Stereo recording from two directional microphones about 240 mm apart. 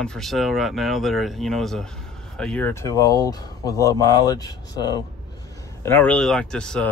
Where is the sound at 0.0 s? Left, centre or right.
Centre.